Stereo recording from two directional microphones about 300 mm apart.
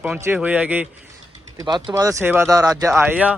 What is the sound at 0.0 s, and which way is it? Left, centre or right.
Speech, centre.